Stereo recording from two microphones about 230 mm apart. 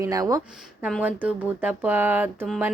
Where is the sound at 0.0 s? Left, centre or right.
Centre.